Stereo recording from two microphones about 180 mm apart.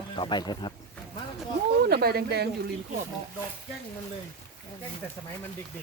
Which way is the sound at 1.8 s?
60° right (ahead or behind).